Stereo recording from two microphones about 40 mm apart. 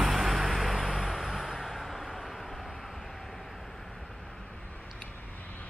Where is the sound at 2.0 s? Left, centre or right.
Centre.